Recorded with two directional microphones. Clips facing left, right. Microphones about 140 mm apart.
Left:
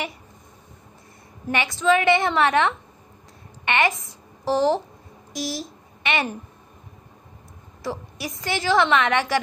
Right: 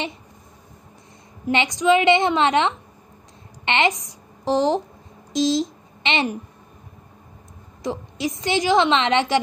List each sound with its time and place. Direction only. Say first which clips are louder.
1.5 s a woman's voice: right 3 dB; 20° right (ahead or behind)
7.8 s a woman's voice: right 5 dB; 20° right (ahead or behind)